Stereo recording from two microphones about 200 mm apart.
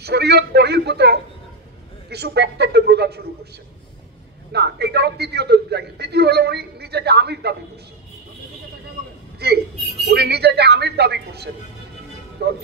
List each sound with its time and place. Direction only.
0.0 s a man's voice: 55° right (ahead or behind)
4.5 s a man's voice: 55° right (ahead or behind)
9.4 s a man's voice: 55° right (ahead or behind)